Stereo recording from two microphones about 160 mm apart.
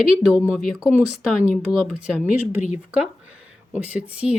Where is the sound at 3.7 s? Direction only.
10° right (ahead or behind).